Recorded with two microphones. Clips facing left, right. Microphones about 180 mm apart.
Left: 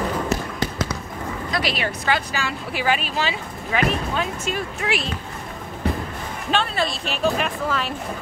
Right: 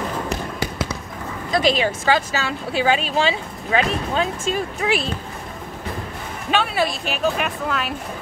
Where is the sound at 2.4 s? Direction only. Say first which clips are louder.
Right 4 dB; 25° right (ahead or behind).